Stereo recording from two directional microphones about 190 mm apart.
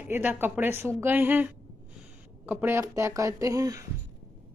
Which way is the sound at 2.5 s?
10° right (ahead or behind).